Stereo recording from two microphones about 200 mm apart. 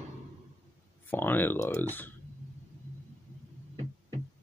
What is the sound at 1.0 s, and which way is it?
Speech, 10° left (ahead or behind).